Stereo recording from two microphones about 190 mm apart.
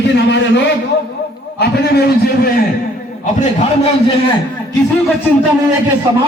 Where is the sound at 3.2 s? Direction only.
40° left (ahead or behind).